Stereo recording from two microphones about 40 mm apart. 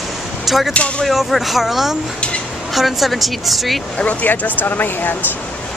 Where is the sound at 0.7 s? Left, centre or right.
Left.